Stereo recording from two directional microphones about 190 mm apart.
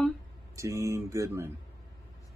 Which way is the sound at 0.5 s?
15° right (ahead or behind).